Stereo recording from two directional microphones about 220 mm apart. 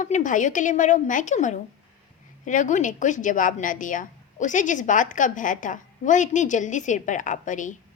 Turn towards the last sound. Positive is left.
turn(degrees=35)  # may be behind; listen again after turning